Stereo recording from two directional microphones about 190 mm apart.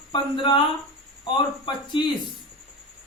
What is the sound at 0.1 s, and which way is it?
Speech, 25° left (ahead or behind).